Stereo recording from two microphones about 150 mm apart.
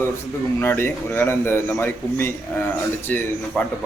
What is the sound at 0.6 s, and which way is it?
A man's voice, 15° left (ahead or behind).